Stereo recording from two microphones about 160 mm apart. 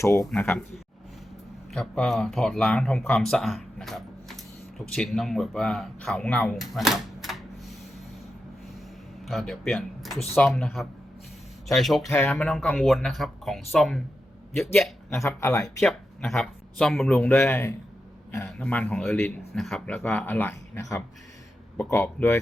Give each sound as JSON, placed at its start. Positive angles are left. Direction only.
{"t": 0.0, "sound": "speech", "side_deg": 20}
{"t": 1.7, "sound": "speech", "side_deg": 5}
{"t": 9.2, "sound": "speech", "side_deg": 0}
{"t": 14.5, "sound": "speech", "side_deg": 15}
{"t": 15.6, "sound": "speech", "side_deg": 5}